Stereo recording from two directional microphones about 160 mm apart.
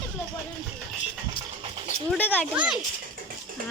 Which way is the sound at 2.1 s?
10° left (ahead or behind).